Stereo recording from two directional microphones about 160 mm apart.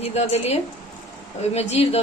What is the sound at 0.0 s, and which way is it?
A woman's voice, 40° left (ahead or behind).